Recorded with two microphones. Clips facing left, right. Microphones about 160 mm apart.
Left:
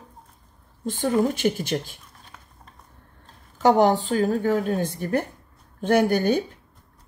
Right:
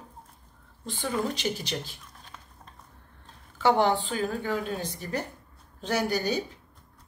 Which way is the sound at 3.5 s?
45° left (ahead or behind).